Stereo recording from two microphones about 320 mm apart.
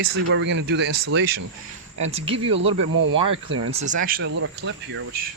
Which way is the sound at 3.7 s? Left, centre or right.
Right.